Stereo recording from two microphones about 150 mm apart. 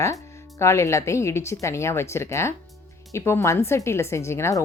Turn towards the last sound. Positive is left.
turn(degrees=20)  # may be behind; listen again after turning